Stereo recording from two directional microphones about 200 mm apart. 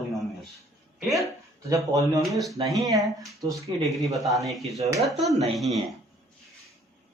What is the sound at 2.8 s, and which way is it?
Speech, 15° right (ahead or behind).